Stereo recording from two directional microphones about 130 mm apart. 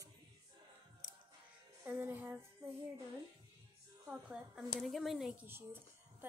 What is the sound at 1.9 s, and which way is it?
Speech, 15° right (ahead or behind).